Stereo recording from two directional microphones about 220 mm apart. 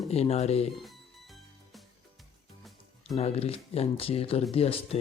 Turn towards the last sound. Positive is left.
turn(degrees=25)  # may be behind; listen again after turning